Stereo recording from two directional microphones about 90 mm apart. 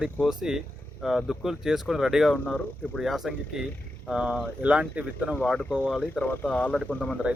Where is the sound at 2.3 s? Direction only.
10° left (ahead or behind); by 5.3 s 15° right (ahead or behind).